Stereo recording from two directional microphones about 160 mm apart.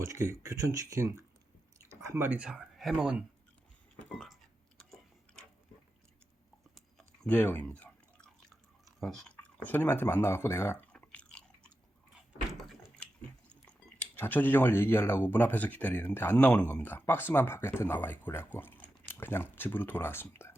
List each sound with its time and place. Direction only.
0.0 s speech: 20° right (ahead or behind)
4.0 s a sound: 5° left (ahead or behind)
6.7 s chewing: centre (ahead or behind)
12.5 s door: centre (ahead or behind)
13.5 s speech: 10° left (ahead or behind)